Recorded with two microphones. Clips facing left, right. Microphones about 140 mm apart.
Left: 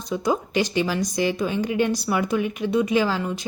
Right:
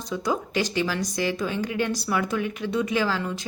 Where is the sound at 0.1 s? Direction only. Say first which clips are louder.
Left 3 dB; 20° left (ahead or behind).